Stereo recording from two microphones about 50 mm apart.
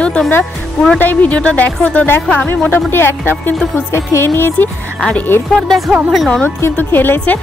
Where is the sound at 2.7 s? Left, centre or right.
Left.